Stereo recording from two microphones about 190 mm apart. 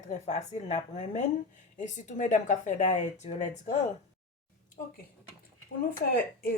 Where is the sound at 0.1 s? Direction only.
35° left (ahead or behind).